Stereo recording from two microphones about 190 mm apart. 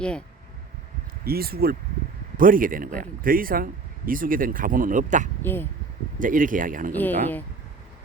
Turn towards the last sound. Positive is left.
turn(degrees=10)  # may be behind; listen again after turning